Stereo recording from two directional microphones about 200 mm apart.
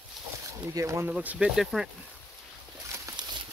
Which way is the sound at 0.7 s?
15° right (ahead or behind).